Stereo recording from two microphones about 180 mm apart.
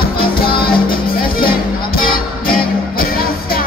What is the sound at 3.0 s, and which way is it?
Music, 55° left (ahead or behind).